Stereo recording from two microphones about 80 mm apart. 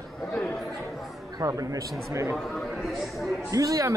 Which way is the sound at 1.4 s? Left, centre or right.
Right.